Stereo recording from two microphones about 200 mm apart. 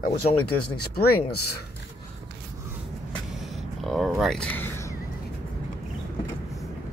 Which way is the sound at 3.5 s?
Centre (ahead or behind).